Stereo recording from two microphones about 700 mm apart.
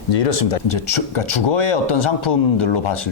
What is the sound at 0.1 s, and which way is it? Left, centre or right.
Speech, left.